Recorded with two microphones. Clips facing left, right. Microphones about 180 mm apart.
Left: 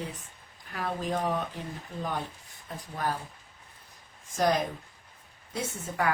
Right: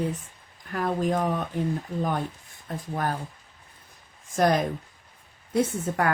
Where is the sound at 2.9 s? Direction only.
50° right (ahead or behind).